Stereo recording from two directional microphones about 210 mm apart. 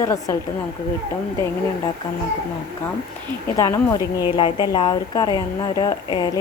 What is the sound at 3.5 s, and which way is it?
A woman's voice, 15° left (ahead or behind).